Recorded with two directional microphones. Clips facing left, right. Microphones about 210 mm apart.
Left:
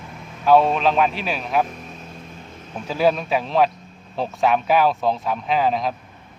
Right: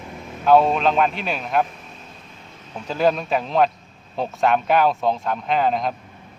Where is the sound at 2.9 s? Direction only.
5° left (ahead or behind).